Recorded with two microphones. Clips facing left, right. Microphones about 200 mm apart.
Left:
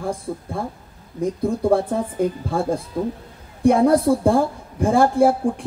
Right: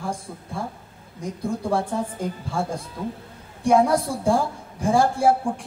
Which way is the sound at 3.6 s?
55° left (ahead or behind).